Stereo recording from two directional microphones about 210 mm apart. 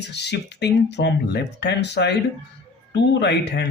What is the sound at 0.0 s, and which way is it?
Speech, 55° left (ahead or behind).